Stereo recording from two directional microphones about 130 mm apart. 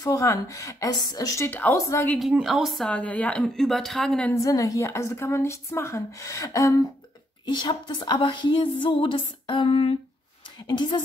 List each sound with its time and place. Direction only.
0.0 s a woman's voice: 25° left (ahead or behind)
2.3 s a woman's voice: 5° right (ahead or behind)
2.9 s a woman's voice: 10° left (ahead or behind)
4.3 s a woman's voice: 25° left (ahead or behind)